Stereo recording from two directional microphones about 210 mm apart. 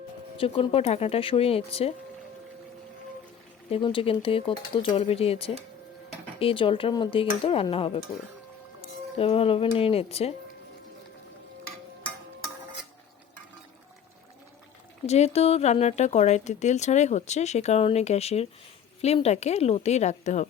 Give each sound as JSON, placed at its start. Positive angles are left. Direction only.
{"t": 0.3, "sound": "speech", "side_deg": 25}
{"t": 3.7, "sound": "speech", "side_deg": 25}
{"t": 9.1, "sound": "speech", "side_deg": 25}
{"t": 15.0, "sound": "speech", "side_deg": 30}